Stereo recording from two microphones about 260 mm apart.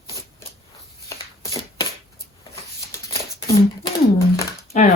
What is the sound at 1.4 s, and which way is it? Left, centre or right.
Shuffling cards, centre.